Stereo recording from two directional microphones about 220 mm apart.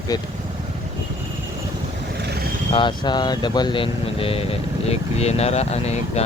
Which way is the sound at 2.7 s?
20° left (ahead or behind).